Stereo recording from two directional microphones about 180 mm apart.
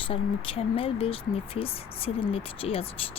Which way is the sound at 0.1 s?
30° left (ahead or behind).